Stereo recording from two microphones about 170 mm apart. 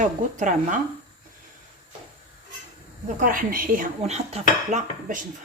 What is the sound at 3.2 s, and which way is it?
Speech, 55° right (ahead or behind).